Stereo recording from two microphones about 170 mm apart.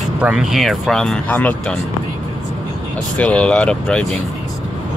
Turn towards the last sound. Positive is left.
turn(degrees=5)  # may be behind; listen again after turning